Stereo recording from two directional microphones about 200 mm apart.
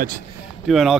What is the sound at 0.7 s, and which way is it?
Speech, centre (ahead or behind).